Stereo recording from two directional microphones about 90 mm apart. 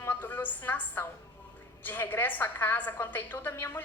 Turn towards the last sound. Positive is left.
turn(degrees=25)  # may be behind; listen again after turning